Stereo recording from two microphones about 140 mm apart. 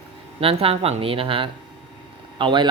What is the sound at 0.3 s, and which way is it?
Speech, 40° right (ahead or behind).